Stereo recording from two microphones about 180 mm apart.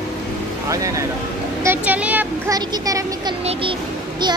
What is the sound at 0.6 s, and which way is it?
Speech, 20° right (ahead or behind).